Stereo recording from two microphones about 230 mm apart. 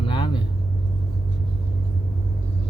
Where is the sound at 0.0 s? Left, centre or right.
Left.